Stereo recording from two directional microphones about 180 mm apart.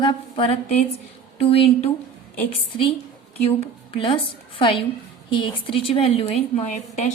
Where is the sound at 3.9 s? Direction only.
30° left (ahead or behind).